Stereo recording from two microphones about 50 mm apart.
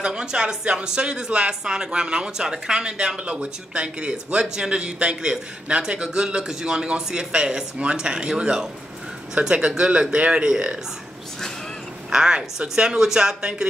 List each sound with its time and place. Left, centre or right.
0.0 s speech: centre
12.1 s speech: centre